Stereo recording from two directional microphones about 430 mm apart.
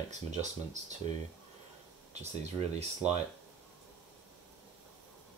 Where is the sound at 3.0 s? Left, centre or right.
Centre.